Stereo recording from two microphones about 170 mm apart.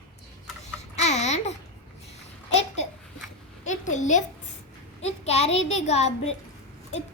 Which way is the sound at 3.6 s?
45° left (ahead or behind).